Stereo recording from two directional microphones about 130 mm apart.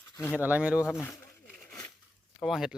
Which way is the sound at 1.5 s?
5° left (ahead or behind).